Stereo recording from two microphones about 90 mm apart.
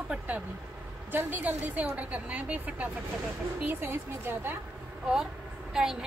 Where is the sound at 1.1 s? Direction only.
20° right (ahead or behind).